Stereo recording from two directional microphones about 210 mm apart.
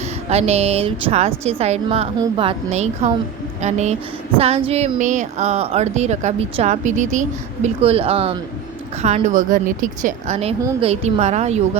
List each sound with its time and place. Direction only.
0.3 s a woman's voice: 30° right (ahead or behind)